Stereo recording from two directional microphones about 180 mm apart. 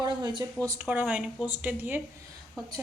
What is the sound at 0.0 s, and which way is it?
A woman's voice, 25° right (ahead or behind).